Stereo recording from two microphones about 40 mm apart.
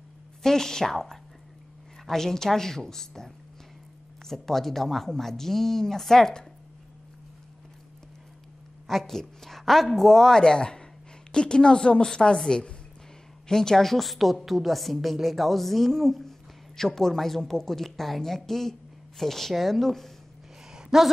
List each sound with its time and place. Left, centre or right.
0.4 s speech: centre
4.3 s speech: centre
8.8 s a woman's voice: centre
20.7 s a sound: centre